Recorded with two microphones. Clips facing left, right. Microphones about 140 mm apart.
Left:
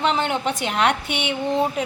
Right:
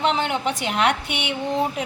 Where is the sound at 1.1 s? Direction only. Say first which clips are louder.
Left 2 dB; 65° right (ahead or behind).